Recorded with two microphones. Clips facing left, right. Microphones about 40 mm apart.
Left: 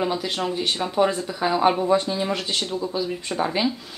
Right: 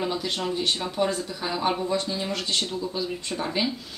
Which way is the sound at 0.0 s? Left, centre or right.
Centre.